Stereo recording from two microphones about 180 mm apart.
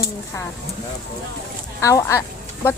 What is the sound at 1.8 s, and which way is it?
Speech, 15° left (ahead or behind).